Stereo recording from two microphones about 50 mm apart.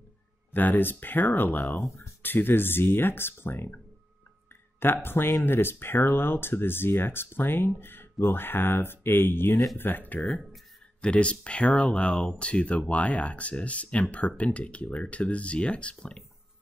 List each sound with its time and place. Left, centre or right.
0.5 s speech: left
11.0 s speech: left